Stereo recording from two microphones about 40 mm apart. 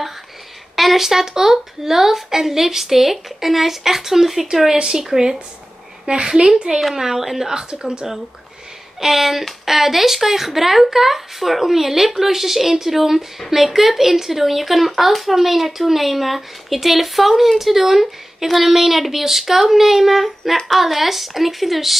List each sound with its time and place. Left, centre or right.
0.7 s a woman's voice: centre
6.7 s a woman's voice: centre
9.0 s a woman's voice: centre